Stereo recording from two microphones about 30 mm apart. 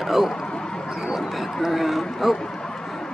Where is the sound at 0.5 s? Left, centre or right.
Left.